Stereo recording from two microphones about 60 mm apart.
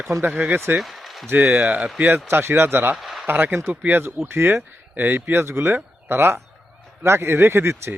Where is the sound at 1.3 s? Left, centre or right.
Right.